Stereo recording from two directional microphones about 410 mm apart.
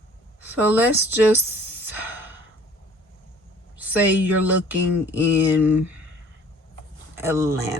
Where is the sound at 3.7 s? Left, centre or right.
Centre.